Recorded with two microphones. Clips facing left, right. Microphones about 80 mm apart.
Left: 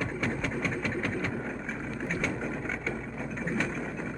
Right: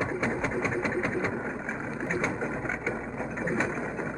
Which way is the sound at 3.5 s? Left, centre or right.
Right.